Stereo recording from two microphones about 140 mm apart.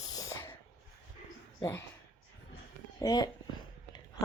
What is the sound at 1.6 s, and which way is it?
Speech, 15° left (ahead or behind).